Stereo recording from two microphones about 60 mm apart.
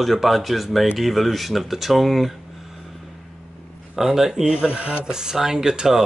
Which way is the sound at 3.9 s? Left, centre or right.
Centre.